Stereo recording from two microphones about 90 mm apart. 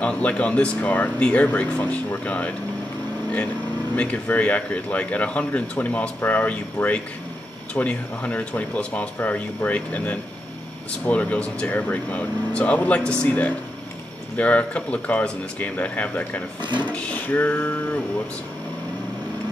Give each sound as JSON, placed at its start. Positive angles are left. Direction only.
{"t": 0.0, "sound": "speech", "side_deg": 15}
{"t": 3.9, "sound": "speech", "side_deg": 15}
{"t": 16.9, "sound": "a sound", "side_deg": 15}